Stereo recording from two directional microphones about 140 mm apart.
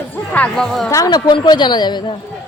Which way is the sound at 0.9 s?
25° left (ahead or behind).